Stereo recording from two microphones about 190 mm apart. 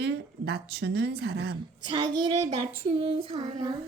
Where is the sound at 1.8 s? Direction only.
25° right (ahead or behind).